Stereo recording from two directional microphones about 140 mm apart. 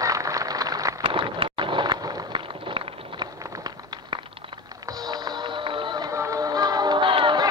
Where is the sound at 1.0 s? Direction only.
40° right (ahead or behind).